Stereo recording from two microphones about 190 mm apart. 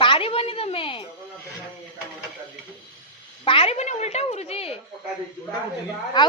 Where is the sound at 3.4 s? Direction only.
30° left (ahead or behind).